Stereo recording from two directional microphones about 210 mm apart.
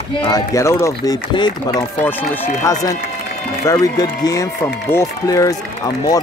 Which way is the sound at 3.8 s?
20° left (ahead or behind).